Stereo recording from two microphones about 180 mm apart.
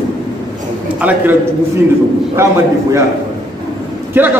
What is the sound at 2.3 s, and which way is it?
Speech, 15° right (ahead or behind).